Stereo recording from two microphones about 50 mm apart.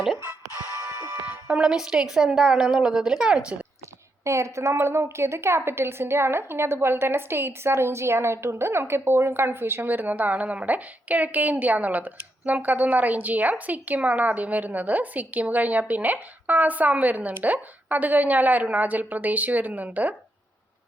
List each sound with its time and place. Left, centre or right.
1.5 s speech: right
1.7 s a woman's voice: centre
4.2 s a woman's voice: right